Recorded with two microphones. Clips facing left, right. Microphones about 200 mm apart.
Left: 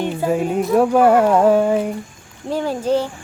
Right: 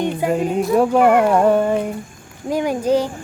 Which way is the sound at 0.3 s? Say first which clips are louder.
Left 1 dB; 5° left (ahead or behind).